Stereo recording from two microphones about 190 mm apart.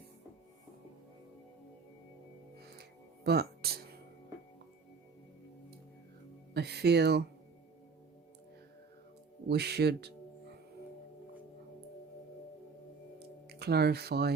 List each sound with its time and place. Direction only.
3.2 s music: 55° right (ahead or behind)
6.5 s speech: 60° right (ahead or behind)
9.5 s speech: 60° right (ahead or behind)
13.1 s music: 60° right (ahead or behind)